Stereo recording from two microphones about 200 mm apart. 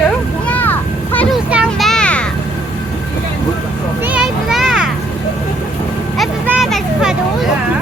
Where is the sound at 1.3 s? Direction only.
5° right (ahead or behind).